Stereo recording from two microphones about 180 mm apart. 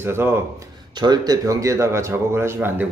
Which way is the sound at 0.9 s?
25° right (ahead or behind).